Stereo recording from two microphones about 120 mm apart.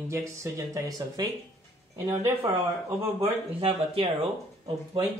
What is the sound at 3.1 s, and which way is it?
Speech, 55° right (ahead or behind).